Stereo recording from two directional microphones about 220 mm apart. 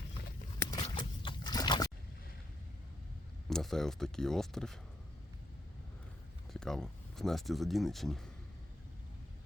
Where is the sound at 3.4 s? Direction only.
Centre (ahead or behind).